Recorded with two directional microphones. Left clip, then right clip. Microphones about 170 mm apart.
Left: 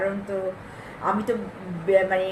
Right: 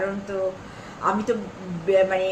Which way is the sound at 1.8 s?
15° right (ahead or behind).